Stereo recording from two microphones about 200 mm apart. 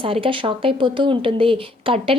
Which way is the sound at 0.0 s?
25° right (ahead or behind).